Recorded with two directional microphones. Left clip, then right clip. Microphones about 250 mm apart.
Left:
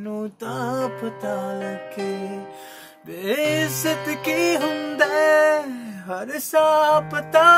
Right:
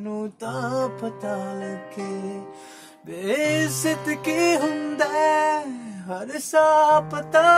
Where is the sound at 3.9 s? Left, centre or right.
Left.